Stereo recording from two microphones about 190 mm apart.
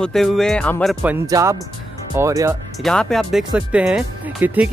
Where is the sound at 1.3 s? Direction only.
20° right (ahead or behind).